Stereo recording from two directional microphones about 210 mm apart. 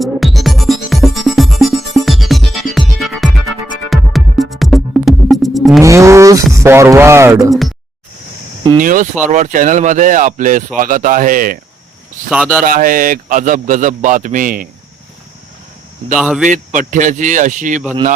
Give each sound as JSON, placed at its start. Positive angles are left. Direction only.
{"t": 0.0, "sound": "music", "side_deg": 0}
{"t": 5.8, "sound": "speech", "side_deg": -15}
{"t": 8.8, "sound": "speech", "side_deg": -40}
{"t": 12.3, "sound": "speech", "side_deg": -5}
{"t": 12.6, "sound": "speech", "side_deg": -40}
{"t": 16.1, "sound": "speech", "side_deg": 0}
{"t": 16.5, "sound": "speech", "side_deg": -35}